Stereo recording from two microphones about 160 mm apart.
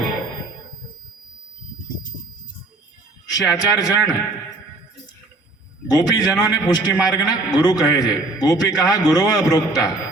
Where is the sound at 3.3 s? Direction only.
25° left (ahead or behind).